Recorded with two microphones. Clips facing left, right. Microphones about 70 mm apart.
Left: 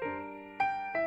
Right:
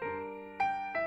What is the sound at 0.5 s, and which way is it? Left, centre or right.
Music, left.